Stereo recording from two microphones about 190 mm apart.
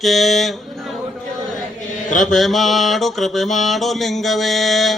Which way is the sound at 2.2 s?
Centre (ahead or behind).